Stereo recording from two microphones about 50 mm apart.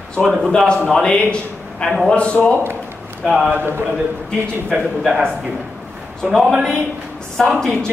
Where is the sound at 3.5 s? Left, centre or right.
Right.